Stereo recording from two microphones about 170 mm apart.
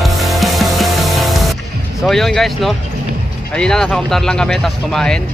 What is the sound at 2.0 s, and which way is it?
Speech, centre (ahead or behind).